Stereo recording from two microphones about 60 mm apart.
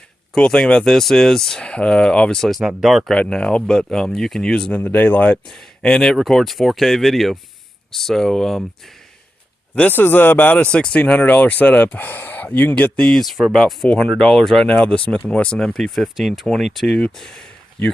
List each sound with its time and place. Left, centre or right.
0.3 s speech: centre
2.5 s speech: centre
3.2 s speech: centre
4.7 s speech: left
5.5 s speech: centre
9.9 s speech: left
12.8 s speech: centre
13.1 s speech: centre
14.7 s speech: centre